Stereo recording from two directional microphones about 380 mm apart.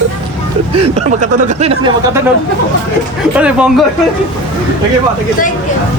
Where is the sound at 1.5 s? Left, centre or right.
Centre.